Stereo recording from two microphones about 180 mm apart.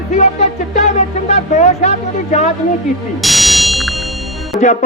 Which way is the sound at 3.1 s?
Centre (ahead or behind).